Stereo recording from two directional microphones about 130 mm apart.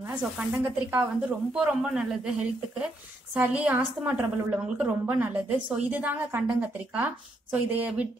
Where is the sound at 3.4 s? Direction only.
15° right (ahead or behind).